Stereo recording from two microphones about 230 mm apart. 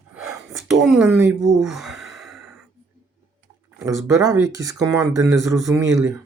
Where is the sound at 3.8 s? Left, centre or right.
Centre.